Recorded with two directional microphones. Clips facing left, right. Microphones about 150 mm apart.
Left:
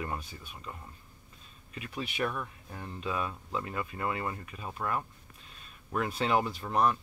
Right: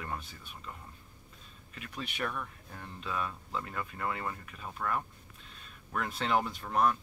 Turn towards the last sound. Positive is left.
turn(degrees=5)  # may be behind; listen again after turning